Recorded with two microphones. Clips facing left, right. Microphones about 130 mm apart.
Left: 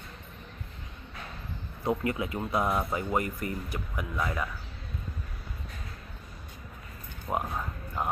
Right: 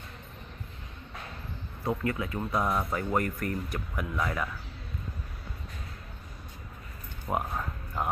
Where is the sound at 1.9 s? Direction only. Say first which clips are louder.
Left 1 dB; 20° left (ahead or behind); by 4.5 s centre (ahead or behind).